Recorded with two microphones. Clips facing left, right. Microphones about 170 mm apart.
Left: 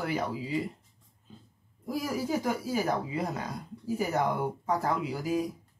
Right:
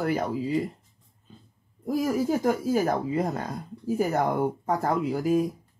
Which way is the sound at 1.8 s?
45° right (ahead or behind).